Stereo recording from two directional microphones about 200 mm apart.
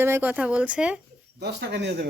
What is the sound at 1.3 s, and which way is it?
Speech, 55° right (ahead or behind).